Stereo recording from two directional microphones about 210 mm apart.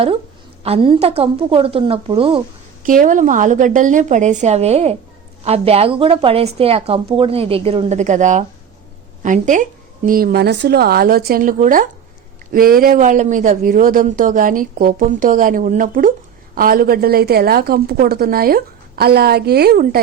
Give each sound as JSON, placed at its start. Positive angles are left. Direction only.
{"t": 0.6, "sound": "a woman's voice", "side_deg": -25}
{"t": 2.8, "sound": "a woman's voice", "side_deg": -40}